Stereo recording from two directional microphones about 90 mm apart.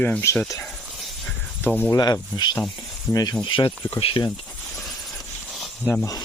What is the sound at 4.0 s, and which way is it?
Speech, 90° left.